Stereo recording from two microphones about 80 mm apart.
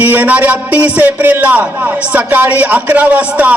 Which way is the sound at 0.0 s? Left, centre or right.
Right.